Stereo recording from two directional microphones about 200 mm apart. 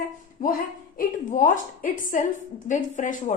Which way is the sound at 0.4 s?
45° left (ahead or behind).